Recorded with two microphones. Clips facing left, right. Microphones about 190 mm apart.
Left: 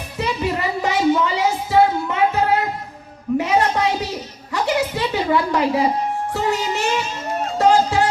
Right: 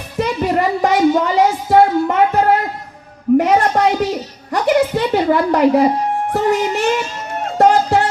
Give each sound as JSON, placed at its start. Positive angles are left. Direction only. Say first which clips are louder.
{"t": 0.2, "sound": "music", "louder": "right 6 dB", "side_deg": -50}
{"t": 3.3, "sound": "a sound", "louder": "right 5 dB", "side_deg": -50}
{"t": 6.3, "sound": "music", "louder": "right 6 dB", "side_deg": -50}